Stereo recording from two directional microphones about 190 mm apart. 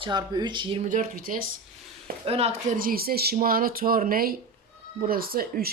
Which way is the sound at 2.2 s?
30° right (ahead or behind).